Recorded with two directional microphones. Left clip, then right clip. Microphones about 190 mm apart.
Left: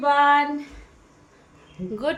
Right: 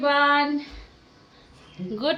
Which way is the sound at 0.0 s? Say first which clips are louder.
Left 2 dB; 20° left (ahead or behind).